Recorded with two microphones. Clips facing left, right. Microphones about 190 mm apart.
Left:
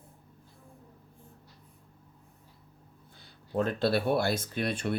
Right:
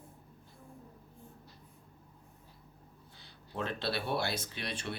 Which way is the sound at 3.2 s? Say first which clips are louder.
Left 9 dB; 45° left (ahead or behind).